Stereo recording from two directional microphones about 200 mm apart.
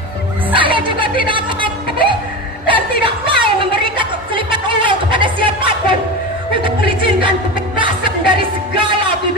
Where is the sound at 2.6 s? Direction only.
25° right (ahead or behind).